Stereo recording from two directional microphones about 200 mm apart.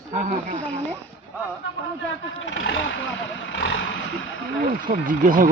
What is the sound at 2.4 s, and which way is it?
Speech, 70° left (ahead or behind).